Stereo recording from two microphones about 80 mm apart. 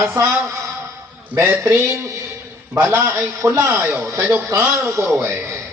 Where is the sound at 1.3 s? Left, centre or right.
Right.